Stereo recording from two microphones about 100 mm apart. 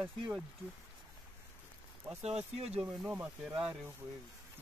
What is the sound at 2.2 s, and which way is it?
Speech, 90° right.